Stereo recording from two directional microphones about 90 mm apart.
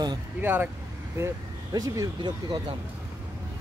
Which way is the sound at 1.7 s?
45° right (ahead or behind).